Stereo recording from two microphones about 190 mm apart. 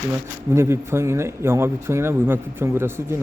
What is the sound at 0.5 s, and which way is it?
A man's voice, 15° right (ahead or behind).